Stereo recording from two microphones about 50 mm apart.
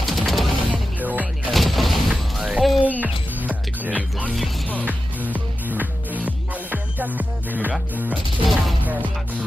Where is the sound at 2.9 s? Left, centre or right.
Right.